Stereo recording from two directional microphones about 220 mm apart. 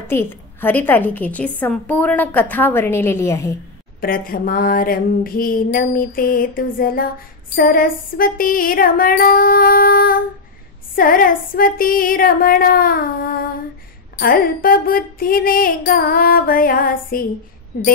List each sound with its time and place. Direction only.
0.0 s a woman's voice: 10° left (ahead or behind)
4.0 s music: 40° left (ahead or behind)
17.7 s a woman's voice: 45° left (ahead or behind)